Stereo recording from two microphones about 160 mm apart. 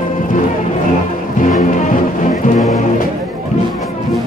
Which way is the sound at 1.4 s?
55° left (ahead or behind).